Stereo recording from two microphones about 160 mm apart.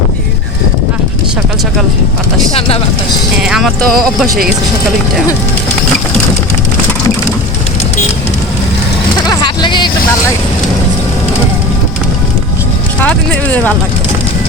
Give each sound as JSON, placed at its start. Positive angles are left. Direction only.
{"t": 2.5, "sound": "vehicle", "side_deg": 35}
{"t": 3.4, "sound": "clip-clop", "side_deg": 0}
{"t": 9.3, "sound": "vehicle", "side_deg": 25}
{"t": 13.0, "sound": "speech", "side_deg": 10}